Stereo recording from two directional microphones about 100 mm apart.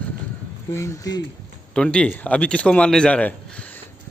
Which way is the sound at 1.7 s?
10° left (ahead or behind).